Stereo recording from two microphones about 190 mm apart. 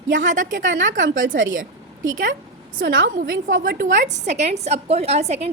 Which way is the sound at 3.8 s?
40° right (ahead or behind).